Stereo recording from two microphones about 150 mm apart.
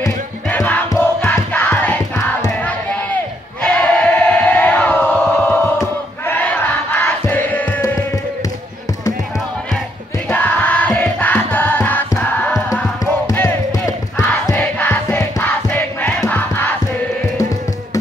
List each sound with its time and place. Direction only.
0.5 s music: 10° left (ahead or behind)
3.6 s crowd: 5° left (ahead or behind)
5.6 s crowd: 15° left (ahead or behind)
10.3 s music: 10° left (ahead or behind)
16.3 s crowd: 10° left (ahead or behind)